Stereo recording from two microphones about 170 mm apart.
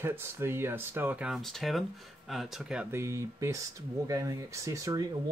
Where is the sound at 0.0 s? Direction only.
15° right (ahead or behind).